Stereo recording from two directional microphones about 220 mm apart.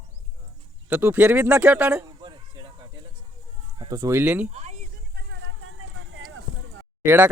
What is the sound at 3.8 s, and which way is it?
Speech, 15° right (ahead or behind).